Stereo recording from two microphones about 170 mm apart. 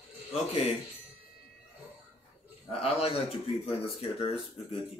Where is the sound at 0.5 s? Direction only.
35° left (ahead or behind).